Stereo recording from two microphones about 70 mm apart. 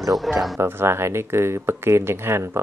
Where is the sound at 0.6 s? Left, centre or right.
Right.